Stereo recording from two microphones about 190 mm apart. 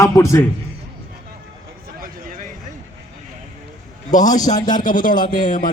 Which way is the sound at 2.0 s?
45° right (ahead or behind).